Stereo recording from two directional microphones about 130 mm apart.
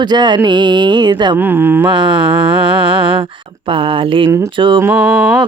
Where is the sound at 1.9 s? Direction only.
40° right (ahead or behind).